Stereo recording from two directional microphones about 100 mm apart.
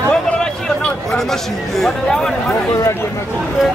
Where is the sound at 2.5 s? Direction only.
30° left (ahead or behind).